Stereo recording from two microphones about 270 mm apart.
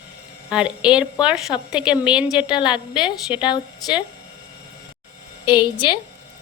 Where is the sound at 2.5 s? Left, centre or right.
Centre.